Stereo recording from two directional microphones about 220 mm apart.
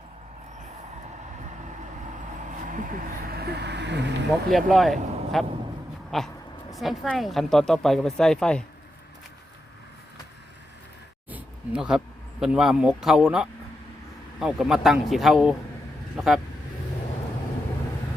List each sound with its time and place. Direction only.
2.6 s speech: 35° right (ahead or behind)
4.3 s speech: centre (ahead or behind)
11.3 s speech: 5° right (ahead or behind)